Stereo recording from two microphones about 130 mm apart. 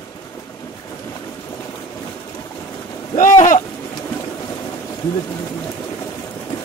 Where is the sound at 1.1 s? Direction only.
25° left (ahead or behind).